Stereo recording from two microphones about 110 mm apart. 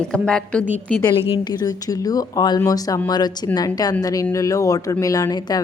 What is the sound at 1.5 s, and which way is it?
Speech, 35° left (ahead or behind).